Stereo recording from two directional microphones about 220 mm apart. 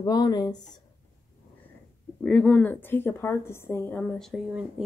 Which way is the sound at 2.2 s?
5° left (ahead or behind).